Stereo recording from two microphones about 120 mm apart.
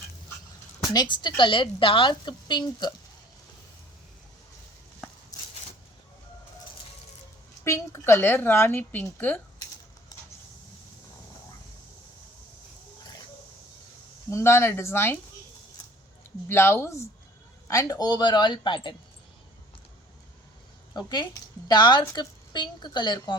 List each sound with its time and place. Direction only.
0.9 s a woman's voice: 40° left (ahead or behind)
5.3 s a sound: 30° left (ahead or behind)
7.6 s a woman's voice: 20° left (ahead or behind)
13.0 s a sound: 35° left (ahead or behind)
14.3 s speech: 20° left (ahead or behind)
16.5 s speech: 20° left (ahead or behind); by 18.9 s 40° left (ahead or behind)
21.7 s speech: 40° left (ahead or behind)